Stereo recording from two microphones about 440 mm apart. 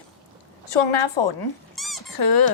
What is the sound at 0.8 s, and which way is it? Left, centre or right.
Speech, left.